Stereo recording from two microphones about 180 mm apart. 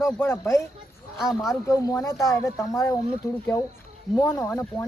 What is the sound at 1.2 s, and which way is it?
Speech, centre (ahead or behind).